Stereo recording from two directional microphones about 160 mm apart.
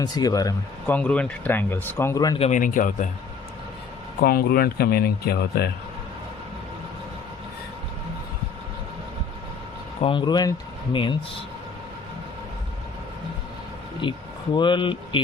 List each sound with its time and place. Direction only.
0.0 s a man's voice: 25° left (ahead or behind)
0.9 s speech: 10° left (ahead or behind)
2.4 s a man's voice: 50° left (ahead or behind)
4.2 s speech: 70° left (ahead or behind)
10.0 s a man's voice: 30° left (ahead or behind)
14.0 s a man's voice: 30° left (ahead or behind)